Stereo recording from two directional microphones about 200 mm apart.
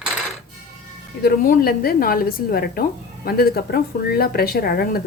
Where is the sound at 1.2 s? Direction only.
50° left (ahead or behind).